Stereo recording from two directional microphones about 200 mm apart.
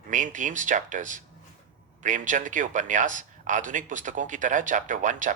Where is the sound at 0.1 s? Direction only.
40° right (ahead or behind).